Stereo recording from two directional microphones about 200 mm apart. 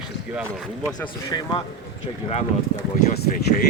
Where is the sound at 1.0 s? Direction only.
20° left (ahead or behind).